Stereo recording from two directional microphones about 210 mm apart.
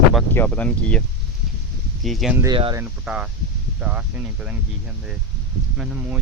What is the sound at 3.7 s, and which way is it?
Speech, 5° right (ahead or behind).